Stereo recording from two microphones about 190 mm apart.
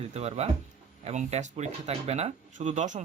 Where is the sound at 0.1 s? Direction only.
35° right (ahead or behind).